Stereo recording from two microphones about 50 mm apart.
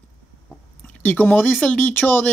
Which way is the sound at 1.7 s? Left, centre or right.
Left.